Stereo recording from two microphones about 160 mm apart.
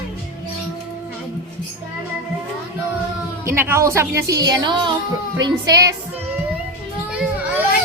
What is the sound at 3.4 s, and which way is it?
Speech, 15° right (ahead or behind).